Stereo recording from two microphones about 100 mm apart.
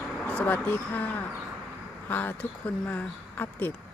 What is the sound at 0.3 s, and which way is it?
Speech, 15° left (ahead or behind).